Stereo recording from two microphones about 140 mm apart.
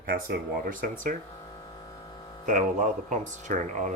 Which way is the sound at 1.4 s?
30° left (ahead or behind).